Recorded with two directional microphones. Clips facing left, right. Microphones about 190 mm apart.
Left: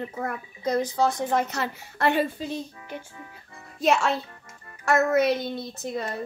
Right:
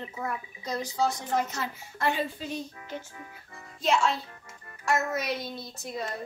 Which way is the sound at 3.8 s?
65° left (ahead or behind).